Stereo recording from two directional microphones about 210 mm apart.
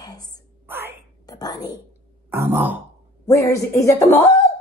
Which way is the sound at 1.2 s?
20° left (ahead or behind).